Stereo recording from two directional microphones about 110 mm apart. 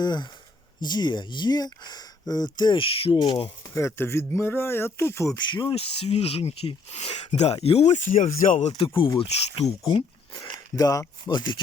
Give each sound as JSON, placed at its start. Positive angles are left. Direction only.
{"t": 0.0, "sound": "speech", "side_deg": 40}
{"t": 3.8, "sound": "speech", "side_deg": 25}
{"t": 5.4, "sound": "speech", "side_deg": 45}
{"t": 5.7, "sound": "speech", "side_deg": 65}
{"t": 8.4, "sound": "speech", "side_deg": 90}
{"t": 8.8, "sound": "speech", "side_deg": 50}
{"t": 10.4, "sound": "speech", "side_deg": 35}
{"t": 11.3, "sound": "speech", "side_deg": 45}